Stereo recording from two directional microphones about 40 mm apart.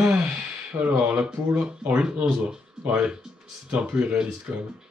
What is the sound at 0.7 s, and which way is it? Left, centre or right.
Speech, right.